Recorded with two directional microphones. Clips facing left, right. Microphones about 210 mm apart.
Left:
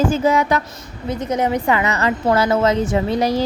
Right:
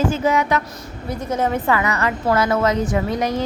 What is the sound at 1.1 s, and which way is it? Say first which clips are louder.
A woman's voice: left 2 dB; 20° left (ahead or behind).